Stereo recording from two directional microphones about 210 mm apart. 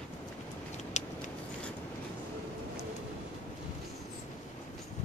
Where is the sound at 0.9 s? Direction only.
35° left (ahead or behind).